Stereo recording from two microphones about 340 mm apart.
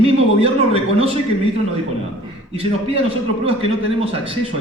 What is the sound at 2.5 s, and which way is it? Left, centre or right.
A man's voice, centre.